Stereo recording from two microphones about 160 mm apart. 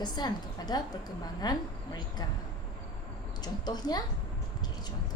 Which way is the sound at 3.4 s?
25° left (ahead or behind).